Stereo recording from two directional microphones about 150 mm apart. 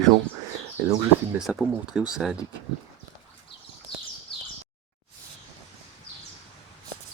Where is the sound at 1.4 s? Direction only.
Centre (ahead or behind).